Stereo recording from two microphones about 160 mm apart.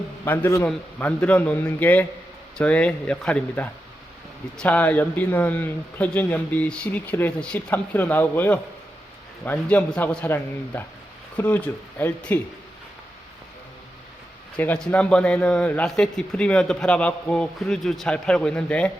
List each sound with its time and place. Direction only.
0.3 s a man's voice: 15° left (ahead or behind)
14.5 s a man's voice: 5° left (ahead or behind)